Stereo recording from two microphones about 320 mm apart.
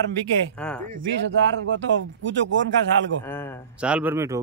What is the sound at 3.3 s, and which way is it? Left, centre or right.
Speech, centre.